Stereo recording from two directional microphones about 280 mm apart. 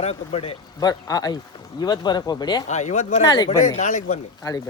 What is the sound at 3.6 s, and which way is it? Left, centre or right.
Speech, left.